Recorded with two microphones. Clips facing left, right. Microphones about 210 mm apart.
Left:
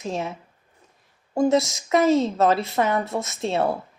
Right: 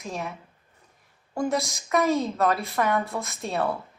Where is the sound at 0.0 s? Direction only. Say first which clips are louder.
Left 5 dB; 25° left (ahead or behind).